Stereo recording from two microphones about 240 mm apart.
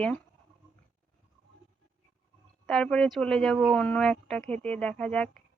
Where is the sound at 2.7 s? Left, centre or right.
Centre.